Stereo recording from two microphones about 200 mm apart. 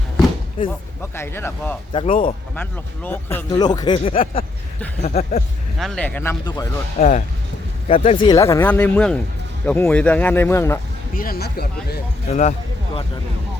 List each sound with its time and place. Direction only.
1.1 s speech: 10° left (ahead or behind)
1.9 s speech: 25° left (ahead or behind)
2.6 s speech: 10° left (ahead or behind); by 5.4 s 35° left (ahead or behind)
5.8 s speech: 5° left (ahead or behind)
7.0 s speech: 35° left (ahead or behind); by 10.8 s 10° left (ahead or behind)
11.1 s speech: 45° left (ahead or behind)
12.3 s speech: 35° left (ahead or behind)